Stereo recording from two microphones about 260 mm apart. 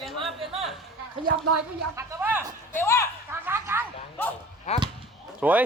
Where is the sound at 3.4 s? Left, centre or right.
Centre.